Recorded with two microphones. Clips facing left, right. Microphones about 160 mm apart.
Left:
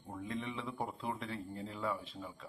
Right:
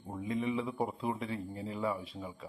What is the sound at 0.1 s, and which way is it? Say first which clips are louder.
A man's voice: right 7 dB; 5° right (ahead or behind).